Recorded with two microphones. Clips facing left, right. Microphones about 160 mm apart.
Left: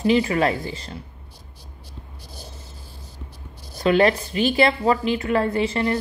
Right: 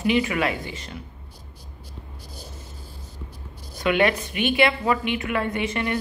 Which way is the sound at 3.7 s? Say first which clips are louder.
Left 3 dB; 35° left (ahead or behind).